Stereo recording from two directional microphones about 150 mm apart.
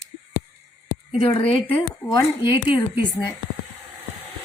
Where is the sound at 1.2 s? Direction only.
40° left (ahead or behind).